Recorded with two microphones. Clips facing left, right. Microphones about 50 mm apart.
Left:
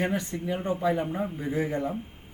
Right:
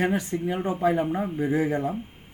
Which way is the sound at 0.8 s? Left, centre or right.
Right.